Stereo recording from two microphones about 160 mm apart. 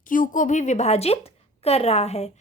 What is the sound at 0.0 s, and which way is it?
A woman's voice, 55° left (ahead or behind).